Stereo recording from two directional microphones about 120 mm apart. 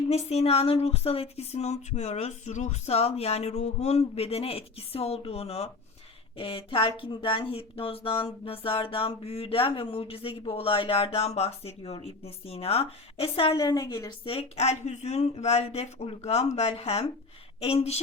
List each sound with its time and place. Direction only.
0.1 s speech: 60° left (ahead or behind)
6.3 s a sound: 50° left (ahead or behind)
13.6 s a woman's voice: 35° left (ahead or behind)
14.3 s speech: 55° left (ahead or behind)